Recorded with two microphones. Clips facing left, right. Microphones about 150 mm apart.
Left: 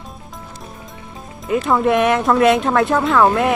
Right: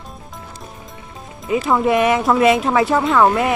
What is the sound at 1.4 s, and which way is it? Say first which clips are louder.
Speech: even; centre (ahead or behind).